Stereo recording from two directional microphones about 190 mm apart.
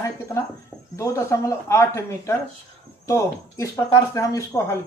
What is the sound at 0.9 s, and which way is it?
Speech, 15° left (ahead or behind).